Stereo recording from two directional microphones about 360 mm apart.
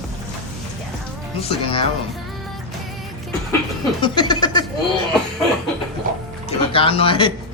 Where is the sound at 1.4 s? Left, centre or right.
Centre.